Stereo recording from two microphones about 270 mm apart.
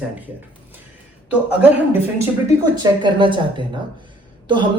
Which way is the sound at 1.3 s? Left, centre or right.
Centre.